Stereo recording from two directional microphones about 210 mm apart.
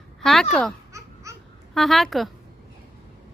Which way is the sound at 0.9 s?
15° right (ahead or behind).